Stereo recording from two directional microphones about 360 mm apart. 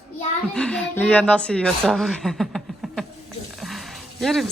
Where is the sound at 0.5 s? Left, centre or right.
Centre.